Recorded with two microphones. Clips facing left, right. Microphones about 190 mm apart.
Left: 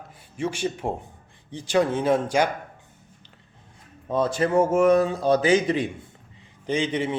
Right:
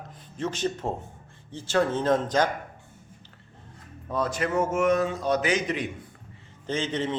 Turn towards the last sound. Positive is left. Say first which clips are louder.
# left 3 dB
turn(degrees=10)  # may be behind; listen again after turning